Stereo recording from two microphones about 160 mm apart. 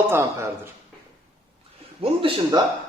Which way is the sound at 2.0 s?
35° right (ahead or behind).